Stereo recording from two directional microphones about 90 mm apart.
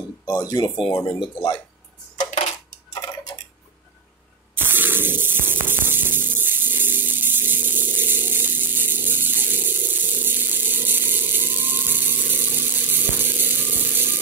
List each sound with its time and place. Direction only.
0.3 s speech: 45° left (ahead or behind)
0.7 s speech: 65° left (ahead or behind)
4.6 s spray: 20° right (ahead or behind)